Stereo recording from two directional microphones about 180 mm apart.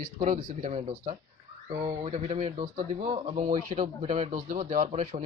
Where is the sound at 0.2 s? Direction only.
40° right (ahead or behind).